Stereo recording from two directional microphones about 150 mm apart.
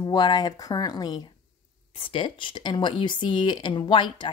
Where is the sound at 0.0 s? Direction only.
30° left (ahead or behind).